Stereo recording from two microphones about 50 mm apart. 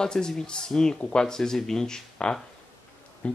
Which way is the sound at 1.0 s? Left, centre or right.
Left.